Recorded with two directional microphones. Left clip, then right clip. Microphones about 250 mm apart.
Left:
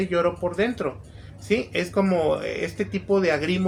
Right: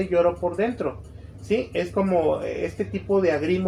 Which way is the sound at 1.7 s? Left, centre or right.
Left.